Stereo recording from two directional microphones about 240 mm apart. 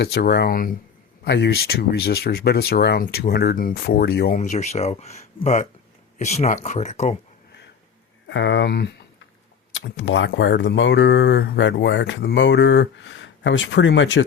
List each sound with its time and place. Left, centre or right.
0.0 s speech: left
4.4 s speech: left
8.3 s speech: left